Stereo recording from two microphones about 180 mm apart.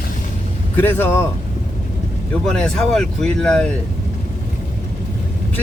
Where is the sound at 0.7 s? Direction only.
10° left (ahead or behind).